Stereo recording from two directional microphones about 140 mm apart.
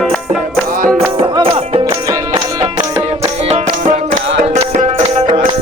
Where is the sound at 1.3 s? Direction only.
40° right (ahead or behind).